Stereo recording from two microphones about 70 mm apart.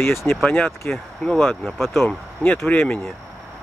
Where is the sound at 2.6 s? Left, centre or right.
Centre.